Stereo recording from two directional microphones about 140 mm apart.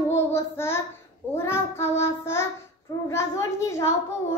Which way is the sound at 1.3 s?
20° left (ahead or behind).